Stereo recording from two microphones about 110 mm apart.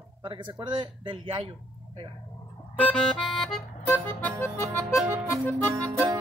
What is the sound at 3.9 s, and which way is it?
Music, 20° left (ahead or behind).